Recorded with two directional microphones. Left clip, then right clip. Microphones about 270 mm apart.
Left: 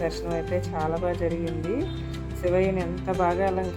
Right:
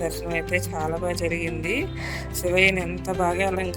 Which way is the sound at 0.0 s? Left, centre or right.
Centre.